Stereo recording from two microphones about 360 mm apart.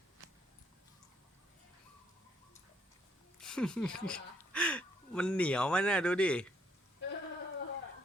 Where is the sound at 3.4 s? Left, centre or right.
Centre.